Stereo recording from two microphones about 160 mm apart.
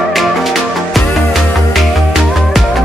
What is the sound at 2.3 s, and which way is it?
Music, centre (ahead or behind).